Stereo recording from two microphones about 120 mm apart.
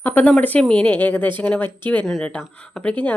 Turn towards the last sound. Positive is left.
turn(degrees=10)  # may be behind; listen again after turning